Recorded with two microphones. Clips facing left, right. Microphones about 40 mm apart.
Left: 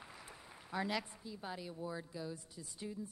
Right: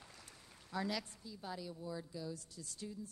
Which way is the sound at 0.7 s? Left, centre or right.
Left.